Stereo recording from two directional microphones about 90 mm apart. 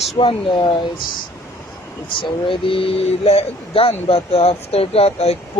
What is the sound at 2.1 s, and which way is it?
Speech, 75° left (ahead or behind).